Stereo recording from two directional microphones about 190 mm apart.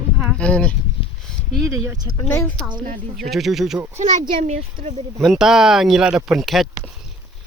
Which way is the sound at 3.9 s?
40° right (ahead or behind).